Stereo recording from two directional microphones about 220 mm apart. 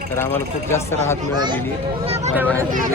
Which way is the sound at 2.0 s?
30° right (ahead or behind).